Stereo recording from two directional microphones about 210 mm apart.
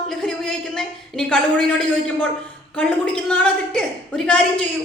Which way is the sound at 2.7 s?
5° left (ahead or behind).